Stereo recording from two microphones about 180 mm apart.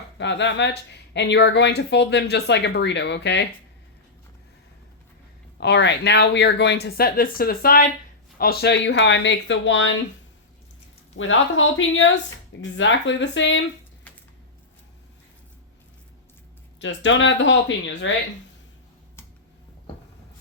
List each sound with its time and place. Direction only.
0.2 s speech: 80° left
5.5 s speech: 75° left (ahead or behind); by 10.0 s 90° left
11.2 s speech: 90° left
16.8 s speech: 90° left